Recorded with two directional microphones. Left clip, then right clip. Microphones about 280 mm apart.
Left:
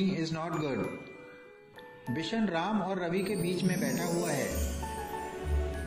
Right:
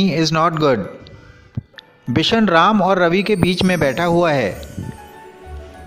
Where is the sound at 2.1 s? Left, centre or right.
Right.